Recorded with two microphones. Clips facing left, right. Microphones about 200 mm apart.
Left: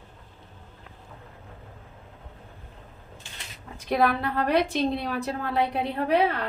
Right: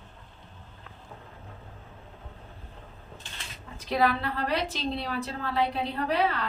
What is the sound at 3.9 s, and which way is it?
A woman's voice, 55° left (ahead or behind).